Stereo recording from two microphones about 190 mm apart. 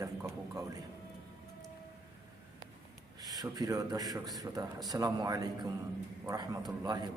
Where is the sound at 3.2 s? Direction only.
20° right (ahead or behind).